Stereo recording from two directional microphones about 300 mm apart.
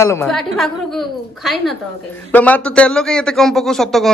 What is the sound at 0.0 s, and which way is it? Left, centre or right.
Speech, centre.